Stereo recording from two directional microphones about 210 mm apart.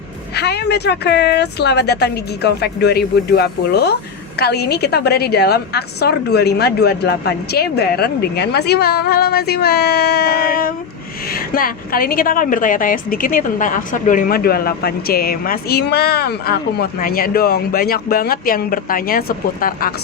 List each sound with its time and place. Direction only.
0.3 s a woman's voice: 50° left (ahead or behind)